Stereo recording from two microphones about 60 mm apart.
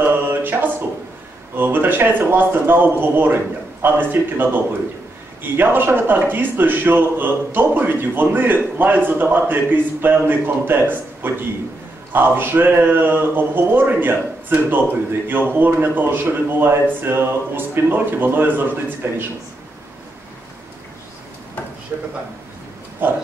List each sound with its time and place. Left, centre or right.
0.0 s music: right
1.6 s a man's voice: right
21.9 s a man's voice: right